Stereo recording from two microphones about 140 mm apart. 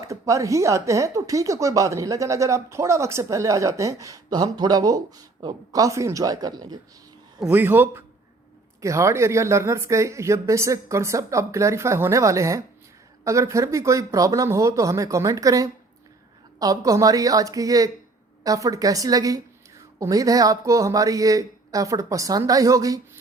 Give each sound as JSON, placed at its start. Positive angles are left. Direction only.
{"t": 0.0, "sound": "speech", "side_deg": -20}
{"t": 7.4, "sound": "speech", "side_deg": -15}